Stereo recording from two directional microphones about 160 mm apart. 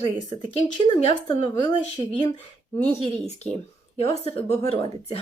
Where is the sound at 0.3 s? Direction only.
25° left (ahead or behind).